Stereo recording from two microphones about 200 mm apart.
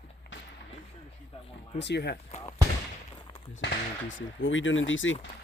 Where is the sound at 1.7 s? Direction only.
60° left (ahead or behind).